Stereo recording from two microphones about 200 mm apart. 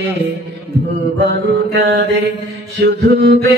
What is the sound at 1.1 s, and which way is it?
Mantra, 55° right (ahead or behind).